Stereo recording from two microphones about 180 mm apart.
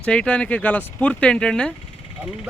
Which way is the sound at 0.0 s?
5° left (ahead or behind).